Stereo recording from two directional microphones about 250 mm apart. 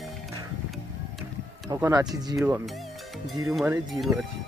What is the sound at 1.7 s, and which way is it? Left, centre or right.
Speech, centre.